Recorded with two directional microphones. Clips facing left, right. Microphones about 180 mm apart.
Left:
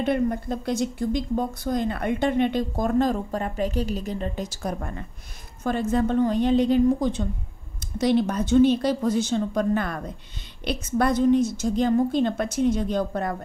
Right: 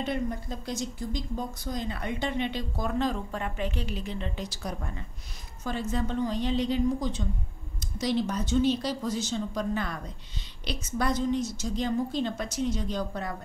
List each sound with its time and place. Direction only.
0.0 s a woman's voice: 60° left (ahead or behind)